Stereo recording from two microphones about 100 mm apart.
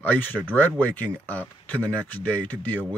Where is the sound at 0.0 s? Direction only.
20° left (ahead or behind).